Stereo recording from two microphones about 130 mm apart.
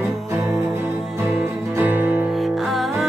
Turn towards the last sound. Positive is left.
turn(degrees=0)  # may be behind; listen again after turning